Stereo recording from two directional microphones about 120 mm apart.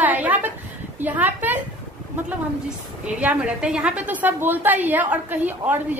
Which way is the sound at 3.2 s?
10° right (ahead or behind).